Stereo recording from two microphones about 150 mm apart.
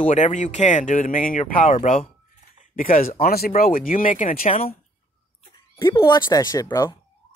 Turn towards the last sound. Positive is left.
turn(degrees=25)  # may be behind; listen again after turning